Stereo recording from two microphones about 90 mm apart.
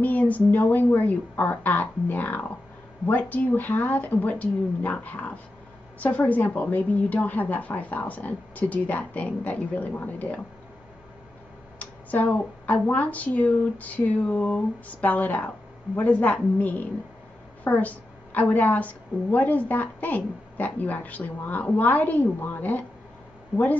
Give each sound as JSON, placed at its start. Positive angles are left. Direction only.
{"t": 0.0, "sound": "a woman's voice", "side_deg": 20}
{"t": 11.8, "sound": "a woman's voice", "side_deg": 15}